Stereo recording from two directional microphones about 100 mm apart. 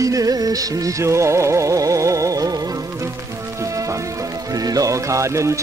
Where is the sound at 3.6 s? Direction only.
30° right (ahead or behind).